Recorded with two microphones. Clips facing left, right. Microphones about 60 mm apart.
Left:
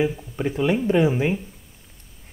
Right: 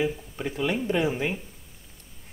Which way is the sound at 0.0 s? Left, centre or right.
Centre.